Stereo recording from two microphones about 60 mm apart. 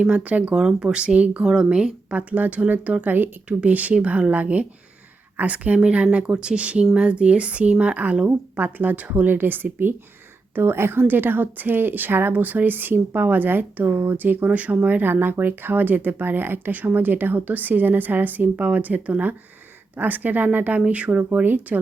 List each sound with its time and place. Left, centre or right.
0.0 s a woman's voice: right
0.5 s a woman's voice: centre; by 21.8 s right